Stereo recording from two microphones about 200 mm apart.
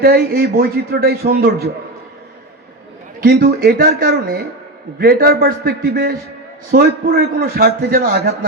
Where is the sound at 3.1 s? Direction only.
45° right (ahead or behind).